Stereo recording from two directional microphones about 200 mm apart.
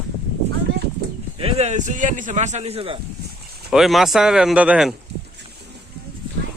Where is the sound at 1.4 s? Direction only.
30° right (ahead or behind).